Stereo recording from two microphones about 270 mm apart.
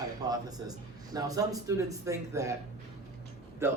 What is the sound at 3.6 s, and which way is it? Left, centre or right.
Speech, centre.